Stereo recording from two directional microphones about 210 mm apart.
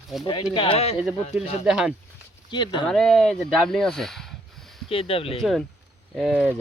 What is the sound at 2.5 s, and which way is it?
Speech, 20° left (ahead or behind).